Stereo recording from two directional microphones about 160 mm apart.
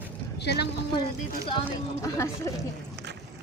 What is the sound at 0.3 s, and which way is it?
Speech, 90° left.